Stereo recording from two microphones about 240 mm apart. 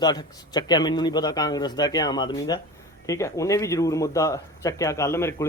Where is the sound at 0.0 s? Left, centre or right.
Centre.